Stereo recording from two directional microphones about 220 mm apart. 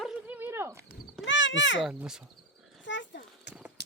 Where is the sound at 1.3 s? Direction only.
55° left (ahead or behind).